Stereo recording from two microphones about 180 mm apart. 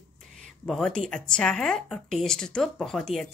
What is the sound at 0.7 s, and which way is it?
A woman's voice, 5° left (ahead or behind).